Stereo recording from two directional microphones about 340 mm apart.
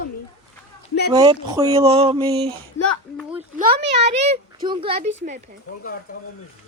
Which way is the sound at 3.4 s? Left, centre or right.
Right.